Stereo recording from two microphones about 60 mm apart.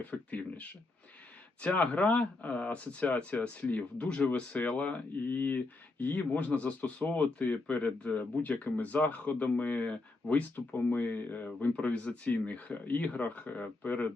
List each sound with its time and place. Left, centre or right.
0.0 s speech: left